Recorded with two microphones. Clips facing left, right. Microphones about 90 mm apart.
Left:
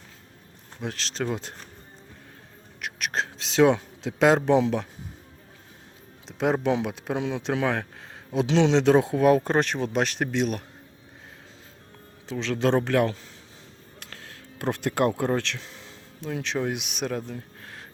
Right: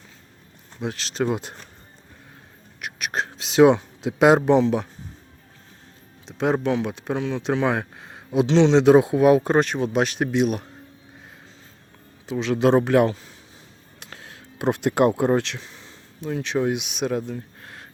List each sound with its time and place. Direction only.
0.8 s speech: 5° right (ahead or behind)
2.8 s whispering: 5° right (ahead or behind)
3.8 s a man's voice: 10° right (ahead or behind)
6.2 s speech: centre (ahead or behind)
7.2 s speech: 15° left (ahead or behind)
7.4 s speech: 5° right (ahead or behind)
8.4 s speech: 5° left (ahead or behind)
8.7 s speech: 10° right (ahead or behind)
12.2 s speech: 15° right (ahead or behind)
15.6 s speech: centre (ahead or behind)